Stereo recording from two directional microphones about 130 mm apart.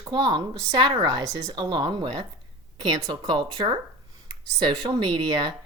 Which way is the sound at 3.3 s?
35° right (ahead or behind).